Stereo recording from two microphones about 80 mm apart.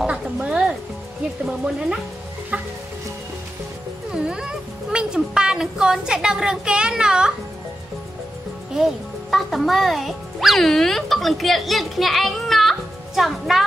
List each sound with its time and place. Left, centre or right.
0.0 s music: centre
1.4 s speech: centre
2.5 s music: centre
4.1 s a sound: centre
9.3 s speech: centre